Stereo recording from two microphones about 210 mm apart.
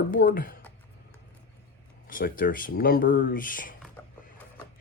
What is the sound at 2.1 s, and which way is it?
Speech, 40° left (ahead or behind).